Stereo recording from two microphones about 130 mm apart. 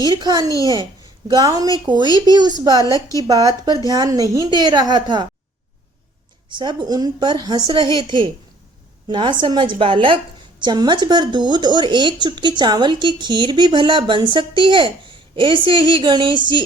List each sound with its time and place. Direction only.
0.0 s a woman's voice: 30° right (ahead or behind)
6.5 s speech: 35° right (ahead or behind)